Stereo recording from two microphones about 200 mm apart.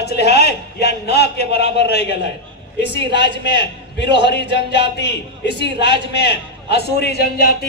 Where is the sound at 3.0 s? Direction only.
25° right (ahead or behind).